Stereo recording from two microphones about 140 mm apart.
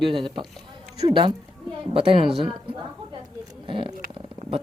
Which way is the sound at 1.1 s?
35° right (ahead or behind).